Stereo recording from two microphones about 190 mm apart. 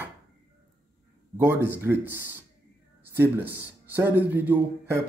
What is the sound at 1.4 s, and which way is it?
Speech, 10° right (ahead or behind).